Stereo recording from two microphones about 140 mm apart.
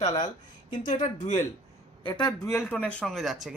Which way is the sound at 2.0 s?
30° left (ahead or behind).